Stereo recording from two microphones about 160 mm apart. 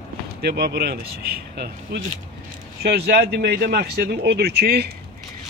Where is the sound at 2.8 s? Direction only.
85° right.